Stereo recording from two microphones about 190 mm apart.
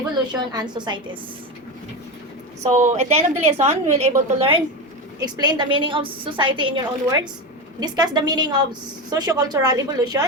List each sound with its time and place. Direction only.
0.5 s a woman's voice: 25° right (ahead or behind)
2.7 s a woman's voice: 40° right (ahead or behind); by 10.2 s 20° right (ahead or behind)